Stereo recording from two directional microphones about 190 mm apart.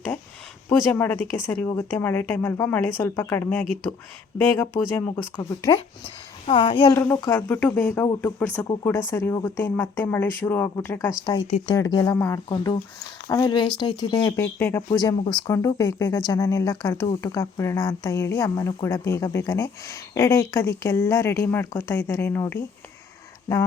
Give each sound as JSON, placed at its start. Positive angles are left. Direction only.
{"t": 0.7, "sound": "speech", "side_deg": 10}
{"t": 6.4, "sound": "speech", "side_deg": 25}
{"t": 6.9, "sound": "speech", "side_deg": 10}